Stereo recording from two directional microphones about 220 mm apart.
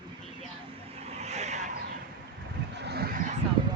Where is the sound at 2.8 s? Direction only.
45° right (ahead or behind).